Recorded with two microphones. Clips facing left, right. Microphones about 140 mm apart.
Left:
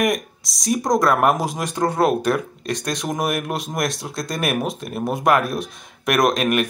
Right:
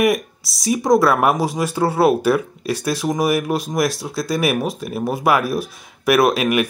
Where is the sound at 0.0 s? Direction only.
5° right (ahead or behind).